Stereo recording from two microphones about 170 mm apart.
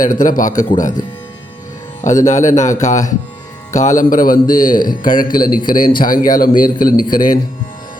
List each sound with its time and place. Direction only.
0.0 s speech: 50° left (ahead or behind)
2.0 s speech: 45° left (ahead or behind)
4.8 s a man's voice: 25° left (ahead or behind)
5.2 s a man's voice: 55° left (ahead or behind)